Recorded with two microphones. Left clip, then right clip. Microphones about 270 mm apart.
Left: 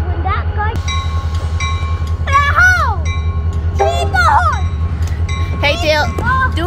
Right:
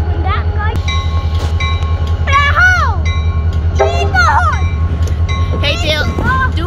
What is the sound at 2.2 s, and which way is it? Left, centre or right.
Music, centre.